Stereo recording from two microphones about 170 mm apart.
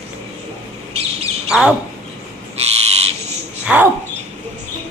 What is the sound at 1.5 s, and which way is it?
Speech, 5° right (ahead or behind).